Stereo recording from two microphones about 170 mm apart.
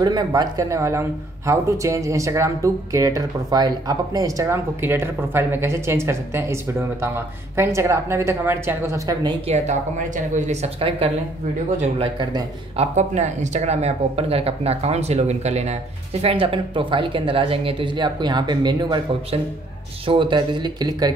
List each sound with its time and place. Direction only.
0.0 s speech: 25° right (ahead or behind)
9.5 s speech: 45° right (ahead or behind); by 12.4 s 25° right (ahead or behind)
12.7 s speech: 45° right (ahead or behind); by 21.1 s 25° right (ahead or behind)